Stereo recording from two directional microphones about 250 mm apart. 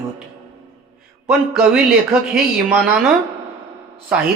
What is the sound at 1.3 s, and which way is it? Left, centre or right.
Speech, centre.